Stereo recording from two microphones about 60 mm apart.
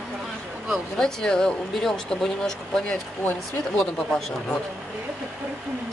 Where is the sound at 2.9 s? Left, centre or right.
Left.